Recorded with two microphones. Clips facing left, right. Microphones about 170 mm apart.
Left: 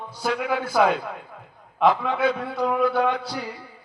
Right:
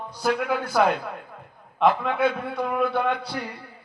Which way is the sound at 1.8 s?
Centre (ahead or behind).